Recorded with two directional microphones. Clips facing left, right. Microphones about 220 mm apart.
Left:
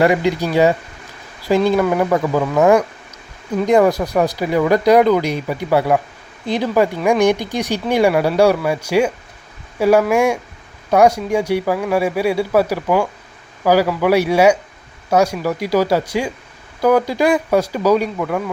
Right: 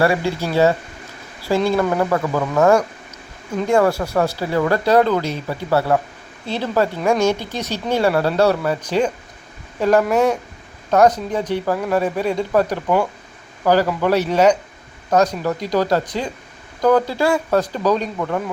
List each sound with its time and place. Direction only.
0.0 s speech: 20° left (ahead or behind); by 18.5 s centre (ahead or behind)